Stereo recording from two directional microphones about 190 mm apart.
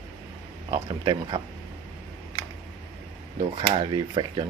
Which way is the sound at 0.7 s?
25° right (ahead or behind).